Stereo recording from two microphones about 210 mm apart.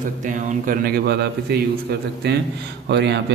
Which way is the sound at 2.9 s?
55° right (ahead or behind).